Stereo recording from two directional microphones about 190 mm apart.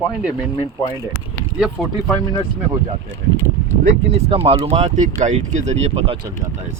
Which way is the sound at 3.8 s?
35° right (ahead or behind).